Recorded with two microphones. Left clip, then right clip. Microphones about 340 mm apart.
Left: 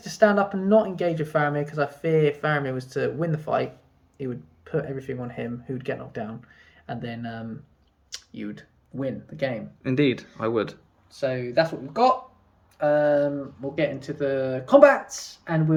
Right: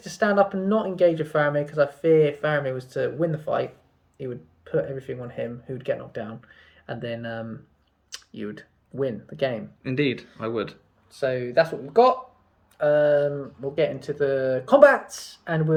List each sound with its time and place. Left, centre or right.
0.0 s speech: centre
9.8 s speech: centre
11.1 s speech: centre